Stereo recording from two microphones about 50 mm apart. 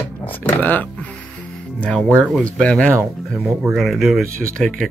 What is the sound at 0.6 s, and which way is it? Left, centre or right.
Speech, left.